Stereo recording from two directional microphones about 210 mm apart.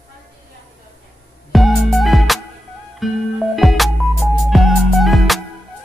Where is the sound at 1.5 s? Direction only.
Centre (ahead or behind).